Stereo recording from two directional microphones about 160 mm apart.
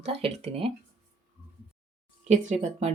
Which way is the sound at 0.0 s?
40° right (ahead or behind).